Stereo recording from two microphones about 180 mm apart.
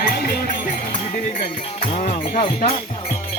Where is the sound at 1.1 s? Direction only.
35° left (ahead or behind).